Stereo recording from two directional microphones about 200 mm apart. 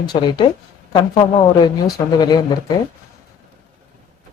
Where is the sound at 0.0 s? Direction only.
20° left (ahead or behind).